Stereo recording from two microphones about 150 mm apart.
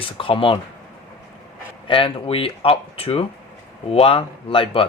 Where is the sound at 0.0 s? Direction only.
35° left (ahead or behind).